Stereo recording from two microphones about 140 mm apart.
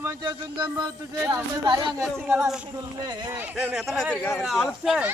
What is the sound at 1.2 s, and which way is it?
Speech, 15° right (ahead or behind).